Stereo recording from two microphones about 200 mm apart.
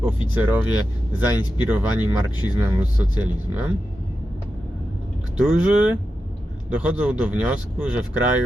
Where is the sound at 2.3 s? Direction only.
20° left (ahead or behind).